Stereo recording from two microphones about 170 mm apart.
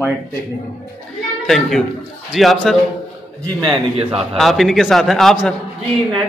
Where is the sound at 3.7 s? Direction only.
35° right (ahead or behind).